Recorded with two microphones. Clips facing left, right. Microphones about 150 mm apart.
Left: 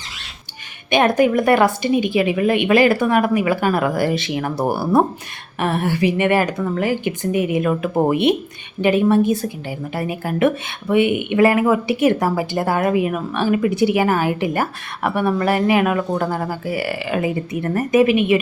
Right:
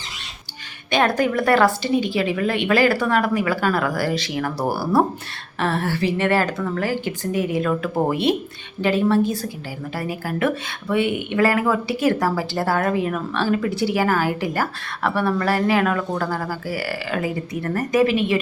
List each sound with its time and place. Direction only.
0.9 s a woman's voice: 20° left (ahead or behind)